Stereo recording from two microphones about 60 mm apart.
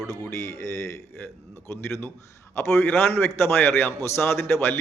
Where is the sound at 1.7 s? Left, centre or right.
Left.